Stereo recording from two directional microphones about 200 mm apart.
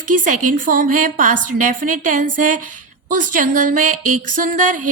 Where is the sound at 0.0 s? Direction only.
40° right (ahead or behind).